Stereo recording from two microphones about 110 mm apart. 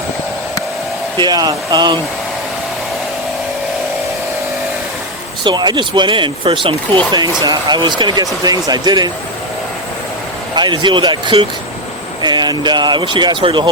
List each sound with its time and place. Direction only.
1.2 s speech: 40° right (ahead or behind)
5.4 s speech: 45° right (ahead or behind)
10.5 s speech: 45° right (ahead or behind)